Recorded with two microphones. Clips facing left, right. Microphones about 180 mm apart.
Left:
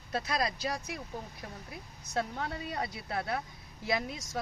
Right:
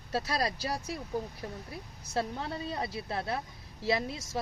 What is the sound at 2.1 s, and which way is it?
Speech, 30° right (ahead or behind).